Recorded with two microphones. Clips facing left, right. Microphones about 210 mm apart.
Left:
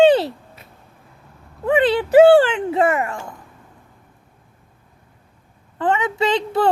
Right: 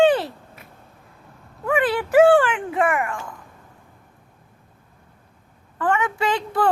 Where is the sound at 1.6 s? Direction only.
20° left (ahead or behind).